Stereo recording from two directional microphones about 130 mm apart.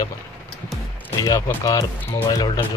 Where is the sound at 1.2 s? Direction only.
30° left (ahead or behind).